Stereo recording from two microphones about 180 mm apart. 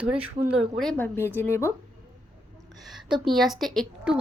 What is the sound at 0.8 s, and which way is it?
Speech, 5° left (ahead or behind).